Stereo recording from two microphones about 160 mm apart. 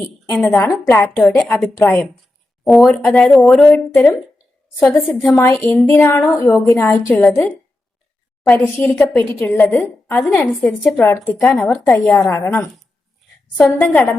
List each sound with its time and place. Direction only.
0.0 s a woman's voice: 5° left (ahead or behind)
1.2 s a woman's voice: centre (ahead or behind)
11.3 s speech: centre (ahead or behind)
11.9 s a woman's voice: 15° left (ahead or behind)